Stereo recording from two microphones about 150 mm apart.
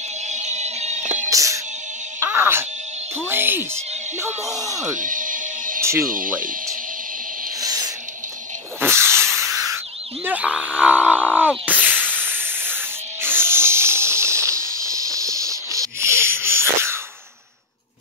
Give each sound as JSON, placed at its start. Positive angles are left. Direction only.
{"t": 0.3, "sound": "music", "side_deg": -50}
{"t": 1.3, "sound": "music", "side_deg": -20}
{"t": 4.6, "sound": "speech", "side_deg": -20}
{"t": 4.9, "sound": "music", "side_deg": -65}
{"t": 5.8, "sound": "music", "side_deg": -15}
{"t": 6.0, "sound": "speech", "side_deg": -65}
{"t": 7.6, "sound": "a sound", "side_deg": -25}
{"t": 8.7, "sound": "hiss", "side_deg": -15}
{"t": 10.2, "sound": "a sound", "side_deg": -10}
{"t": 11.8, "sound": "hiss", "side_deg": -10}
{"t": 13.2, "sound": "music", "side_deg": -15}
{"t": 14.8, "sound": "a sound", "side_deg": -20}